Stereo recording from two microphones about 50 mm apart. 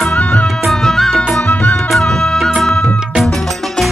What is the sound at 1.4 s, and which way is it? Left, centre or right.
Music, left.